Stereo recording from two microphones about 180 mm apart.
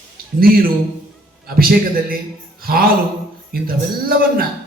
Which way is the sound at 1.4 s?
55° right (ahead or behind).